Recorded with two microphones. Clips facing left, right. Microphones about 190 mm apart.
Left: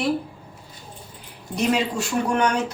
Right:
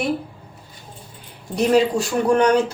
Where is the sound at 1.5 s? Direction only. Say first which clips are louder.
Right 6 dB; 35° right (ahead or behind).